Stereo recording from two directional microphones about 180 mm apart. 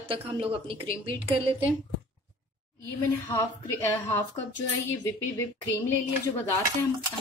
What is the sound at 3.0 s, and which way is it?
A woman's voice, 15° left (ahead or behind).